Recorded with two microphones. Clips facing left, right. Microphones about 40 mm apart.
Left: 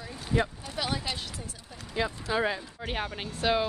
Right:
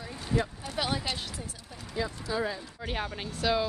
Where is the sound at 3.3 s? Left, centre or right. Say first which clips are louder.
Left 1 dB; left.